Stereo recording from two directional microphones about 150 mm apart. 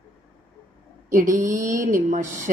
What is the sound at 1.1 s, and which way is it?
Speech, 60° right (ahead or behind).